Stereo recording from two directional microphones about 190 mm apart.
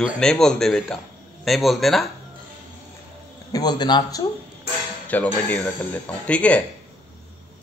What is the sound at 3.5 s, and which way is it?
Speech, 20° left (ahead or behind).